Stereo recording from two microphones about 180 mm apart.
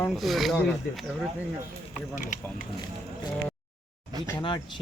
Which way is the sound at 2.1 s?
45° left (ahead or behind).